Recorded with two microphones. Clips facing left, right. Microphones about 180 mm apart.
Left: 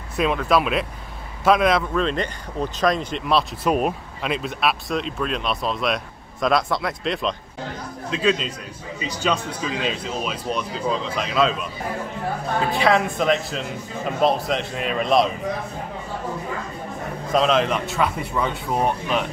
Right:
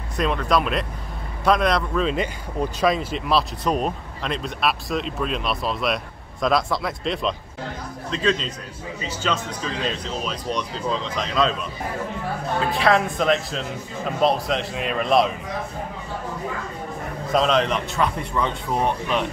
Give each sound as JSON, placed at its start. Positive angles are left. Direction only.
{"t": 0.2, "sound": "a man's voice", "side_deg": 5}
{"t": 12.7, "sound": "speech", "side_deg": 0}
{"t": 17.3, "sound": "speech", "side_deg": 0}